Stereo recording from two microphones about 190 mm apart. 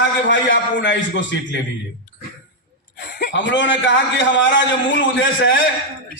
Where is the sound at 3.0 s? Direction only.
55° left (ahead or behind).